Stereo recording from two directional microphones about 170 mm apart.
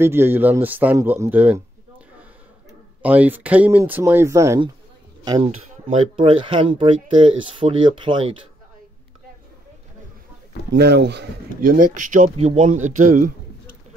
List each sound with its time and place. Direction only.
0.0 s speech: 15° right (ahead or behind)
3.0 s speech: 10° right (ahead or behind)
5.4 s speech: 35° right (ahead or behind)
10.7 s speech: 85° right
11.6 s speech: 55° right (ahead or behind)